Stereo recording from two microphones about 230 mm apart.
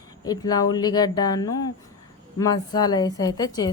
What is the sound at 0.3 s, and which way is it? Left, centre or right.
Speech, centre.